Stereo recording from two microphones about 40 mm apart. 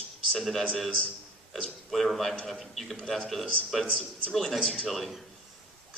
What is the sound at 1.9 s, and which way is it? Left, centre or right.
A man's voice, centre.